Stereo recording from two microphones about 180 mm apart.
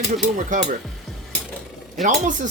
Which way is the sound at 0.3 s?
45° right (ahead or behind).